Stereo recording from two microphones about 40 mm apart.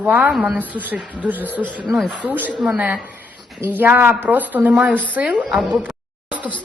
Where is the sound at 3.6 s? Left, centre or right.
Right.